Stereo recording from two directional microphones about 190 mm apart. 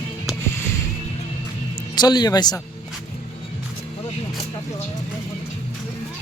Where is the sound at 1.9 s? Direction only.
20° left (ahead or behind).